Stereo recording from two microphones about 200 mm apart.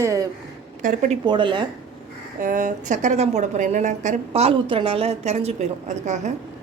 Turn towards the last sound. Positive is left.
turn(degrees=-35)  # may be behind; listen again after turning